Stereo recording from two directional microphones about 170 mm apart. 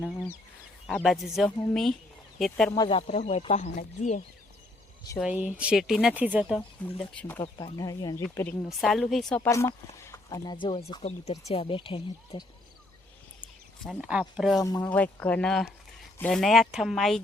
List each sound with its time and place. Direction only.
0.9 s speech: centre (ahead or behind)
2.7 s speech: 25° left (ahead or behind)
3.1 s speech: 40° left (ahead or behind)
5.2 s speech: 10° right (ahead or behind)
7.0 s speech: 10° left (ahead or behind)
7.4 s speech: 25° left (ahead or behind)
8.8 s speech: centre (ahead or behind)
9.4 s speech: 15° left (ahead or behind)
14.0 s speech: 5° right (ahead or behind)
14.6 s speech: 20° left (ahead or behind)
14.8 s speech: 10° left (ahead or behind)